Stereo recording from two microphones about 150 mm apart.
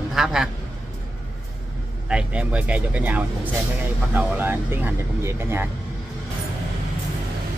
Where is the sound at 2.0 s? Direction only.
5° right (ahead or behind).